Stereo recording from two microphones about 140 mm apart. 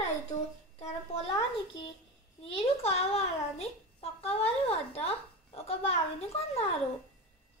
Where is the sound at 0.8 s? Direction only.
50° left (ahead or behind).